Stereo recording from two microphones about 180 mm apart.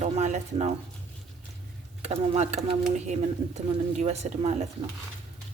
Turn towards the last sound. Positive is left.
turn(degrees=-35)  # may be behind; listen again after turning